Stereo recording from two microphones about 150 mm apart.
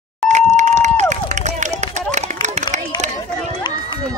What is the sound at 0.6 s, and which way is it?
Run, 50° right (ahead or behind).